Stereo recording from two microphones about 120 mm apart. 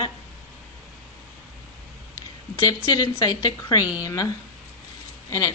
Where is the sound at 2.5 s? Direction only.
30° left (ahead or behind).